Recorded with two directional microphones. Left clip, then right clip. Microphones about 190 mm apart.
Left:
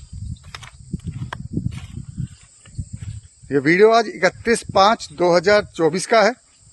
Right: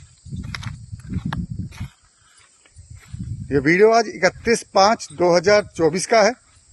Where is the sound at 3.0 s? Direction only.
Centre (ahead or behind).